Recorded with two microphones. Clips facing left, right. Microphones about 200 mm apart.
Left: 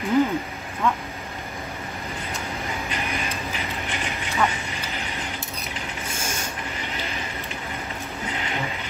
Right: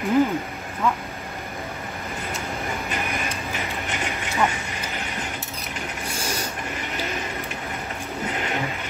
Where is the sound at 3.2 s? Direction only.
50° right (ahead or behind).